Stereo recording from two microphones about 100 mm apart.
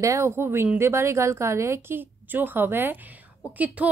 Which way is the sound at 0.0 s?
30° right (ahead or behind).